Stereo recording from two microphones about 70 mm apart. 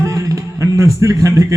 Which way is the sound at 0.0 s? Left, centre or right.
Right.